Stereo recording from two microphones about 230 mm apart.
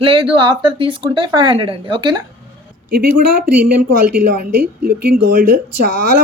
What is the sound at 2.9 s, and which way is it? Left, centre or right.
Speech, right.